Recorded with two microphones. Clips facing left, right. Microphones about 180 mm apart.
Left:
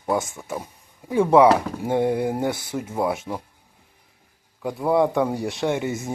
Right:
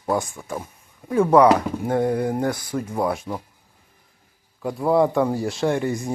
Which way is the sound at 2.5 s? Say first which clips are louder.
Right 1 dB; 25° left (ahead or behind).